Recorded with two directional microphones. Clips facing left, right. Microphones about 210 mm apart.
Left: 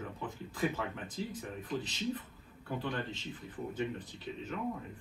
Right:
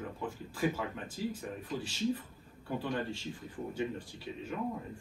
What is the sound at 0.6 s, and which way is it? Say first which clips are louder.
Speech: right 1 dB; 10° right (ahead or behind).